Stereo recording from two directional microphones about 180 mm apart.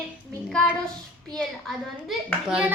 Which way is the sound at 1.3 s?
5° left (ahead or behind).